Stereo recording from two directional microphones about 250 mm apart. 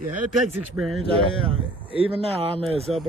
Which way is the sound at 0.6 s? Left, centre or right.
Centre.